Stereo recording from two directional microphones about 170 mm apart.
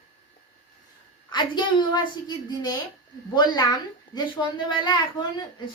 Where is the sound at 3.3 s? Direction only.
25° left (ahead or behind).